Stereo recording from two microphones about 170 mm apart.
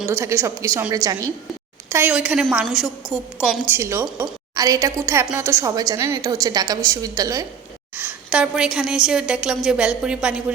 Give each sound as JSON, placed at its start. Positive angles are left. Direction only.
{"t": 0.1, "sound": "a woman's voice", "side_deg": -15}
{"t": 7.9, "sound": "a woman's voice", "side_deg": -10}